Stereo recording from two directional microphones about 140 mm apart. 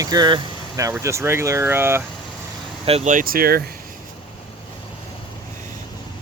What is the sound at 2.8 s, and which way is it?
Speech, 45° right (ahead or behind).